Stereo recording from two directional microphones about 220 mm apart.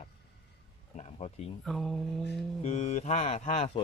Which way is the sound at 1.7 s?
Centre (ahead or behind).